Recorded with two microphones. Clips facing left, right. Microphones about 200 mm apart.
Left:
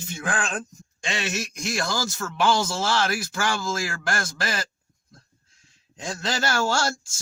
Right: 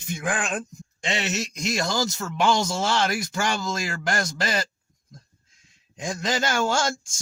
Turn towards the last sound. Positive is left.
turn(degrees=-15)  # may be behind; listen again after turning